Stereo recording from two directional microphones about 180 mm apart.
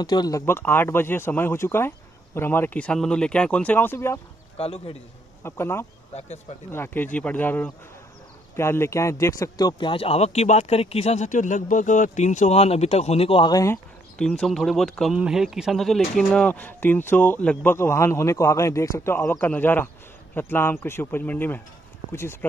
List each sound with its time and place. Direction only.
0.0 s speech: 25° left (ahead or behind)
4.6 s speech: 35° left (ahead or behind)
5.4 s speech: 15° left (ahead or behind)
6.1 s speech: 40° left (ahead or behind)
6.7 s speech: 10° left (ahead or behind)
14.1 s speech: 5° left (ahead or behind)